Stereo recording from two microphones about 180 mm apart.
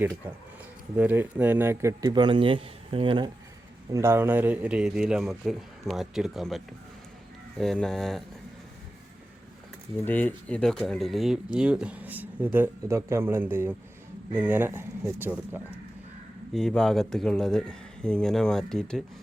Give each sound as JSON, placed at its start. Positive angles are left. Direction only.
{"t": 0.9, "sound": "a man's voice", "side_deg": -10}
{"t": 3.9, "sound": "a man's voice", "side_deg": -15}
{"t": 7.6, "sound": "a man's voice", "side_deg": 0}
{"t": 10.1, "sound": "speech", "side_deg": 10}
{"t": 16.5, "sound": "a man's voice", "side_deg": 0}